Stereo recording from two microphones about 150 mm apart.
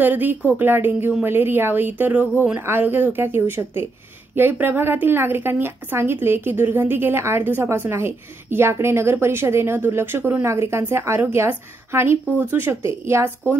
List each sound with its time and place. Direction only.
0.0 s a woman's voice: 10° right (ahead or behind)